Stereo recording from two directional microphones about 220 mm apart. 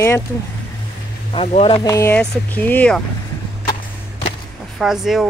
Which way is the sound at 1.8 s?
15° left (ahead or behind).